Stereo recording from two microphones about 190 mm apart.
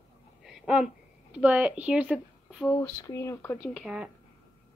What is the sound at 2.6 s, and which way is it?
Speech, 15° left (ahead or behind).